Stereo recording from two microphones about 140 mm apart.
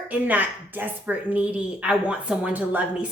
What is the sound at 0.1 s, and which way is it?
A woman's voice, 10° right (ahead or behind).